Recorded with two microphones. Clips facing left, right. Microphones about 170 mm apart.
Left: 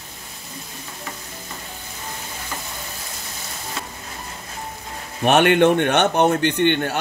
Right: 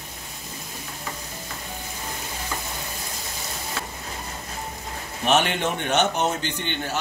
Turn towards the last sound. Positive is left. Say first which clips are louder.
# left 10 dB
turn(degrees=60)  # may be behind; listen again after turning